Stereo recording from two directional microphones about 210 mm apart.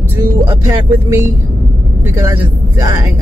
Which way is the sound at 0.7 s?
10° right (ahead or behind).